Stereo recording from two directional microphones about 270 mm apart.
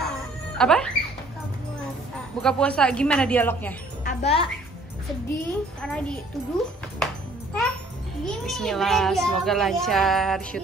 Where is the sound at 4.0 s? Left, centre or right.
Left.